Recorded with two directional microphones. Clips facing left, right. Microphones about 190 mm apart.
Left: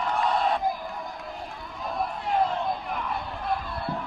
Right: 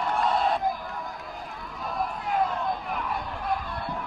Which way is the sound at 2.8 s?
5° right (ahead or behind).